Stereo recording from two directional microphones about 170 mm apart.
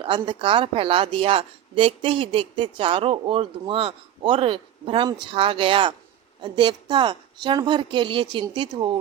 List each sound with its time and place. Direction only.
0.0 s a woman's voice: 30° right (ahead or behind)